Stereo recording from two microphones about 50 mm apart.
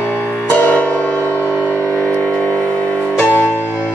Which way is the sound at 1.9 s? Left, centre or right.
Left.